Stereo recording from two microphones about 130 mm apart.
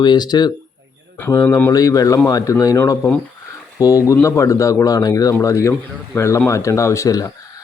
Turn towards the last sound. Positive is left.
turn(degrees=25)  # may be behind; listen again after turning